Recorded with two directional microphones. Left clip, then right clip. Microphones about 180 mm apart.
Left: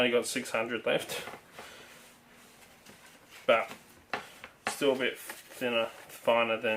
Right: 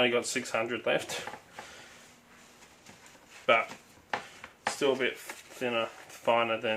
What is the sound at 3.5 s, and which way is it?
Speech, 20° right (ahead or behind).